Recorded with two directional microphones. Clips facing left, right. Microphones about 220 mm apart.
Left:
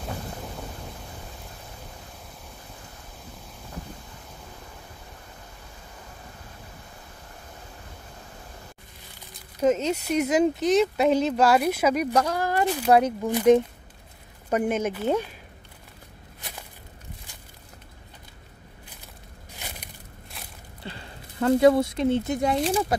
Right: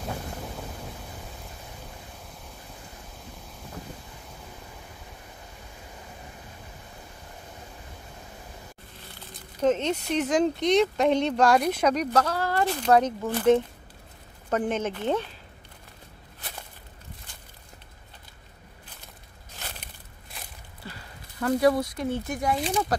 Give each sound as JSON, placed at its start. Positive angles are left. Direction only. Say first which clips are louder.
{"t": 0.5, "sound": "thunder", "louder": "even", "side_deg": 0}
{"t": 9.6, "sound": "speech", "louder": "left 1 dB", "side_deg": 10}
{"t": 19.5, "sound": "a sound", "louder": "left 1 dB", "side_deg": 10}
{"t": 20.3, "sound": "a sound", "louder": "even", "side_deg": 0}
{"t": 20.8, "sound": "speech", "louder": "left 4 dB", "side_deg": 25}
{"t": 22.6, "sound": "speech", "louder": "left 3 dB", "side_deg": 0}